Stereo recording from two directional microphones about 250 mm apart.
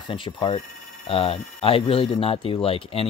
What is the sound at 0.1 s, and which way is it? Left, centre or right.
Speech, centre.